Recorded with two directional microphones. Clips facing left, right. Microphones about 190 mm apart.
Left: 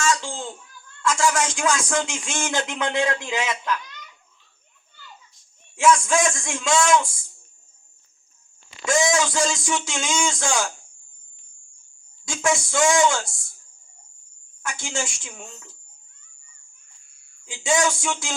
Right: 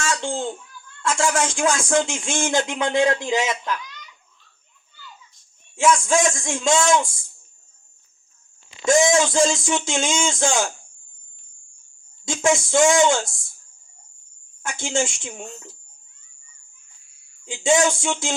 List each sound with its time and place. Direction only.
0.2 s a sound: 55° right (ahead or behind)
1.0 s speech: 30° right (ahead or behind)
5.7 s speech: 25° right (ahead or behind)
8.9 s speech: 25° right (ahead or behind)
12.2 s speech: 25° right (ahead or behind)
14.6 s speech: 25° right (ahead or behind)
16.7 s a sound: 50° left (ahead or behind)
17.4 s speech: 25° right (ahead or behind)